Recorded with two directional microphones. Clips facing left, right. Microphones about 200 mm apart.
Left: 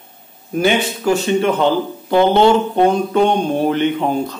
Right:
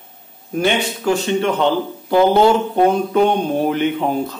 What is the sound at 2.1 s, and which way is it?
A man's voice, 5° right (ahead or behind).